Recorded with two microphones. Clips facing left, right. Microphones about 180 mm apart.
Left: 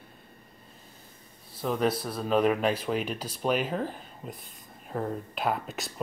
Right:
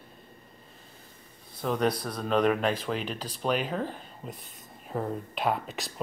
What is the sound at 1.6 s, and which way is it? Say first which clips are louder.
Speech: even; 5° left (ahead or behind).